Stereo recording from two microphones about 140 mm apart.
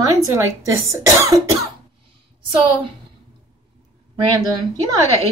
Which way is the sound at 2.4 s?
35° right (ahead or behind).